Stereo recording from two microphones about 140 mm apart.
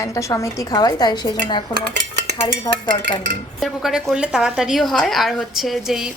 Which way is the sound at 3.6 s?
Centre (ahead or behind).